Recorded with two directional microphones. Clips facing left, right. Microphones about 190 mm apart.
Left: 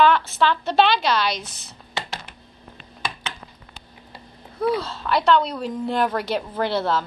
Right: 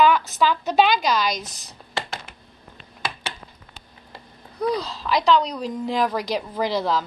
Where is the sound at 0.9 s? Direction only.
40° right (ahead or behind).